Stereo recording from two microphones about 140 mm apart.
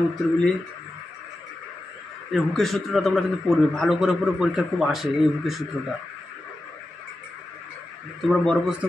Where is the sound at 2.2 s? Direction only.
Centre (ahead or behind).